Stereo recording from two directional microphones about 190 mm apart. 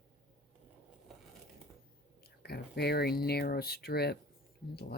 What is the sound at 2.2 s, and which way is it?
Speech, 55° left (ahead or behind).